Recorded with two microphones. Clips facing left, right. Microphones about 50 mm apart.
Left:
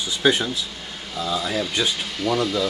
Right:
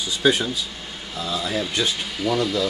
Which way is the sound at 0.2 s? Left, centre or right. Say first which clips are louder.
Even; centre.